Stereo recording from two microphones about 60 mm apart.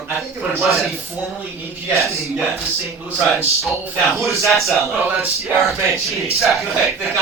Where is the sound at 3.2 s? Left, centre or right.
Centre.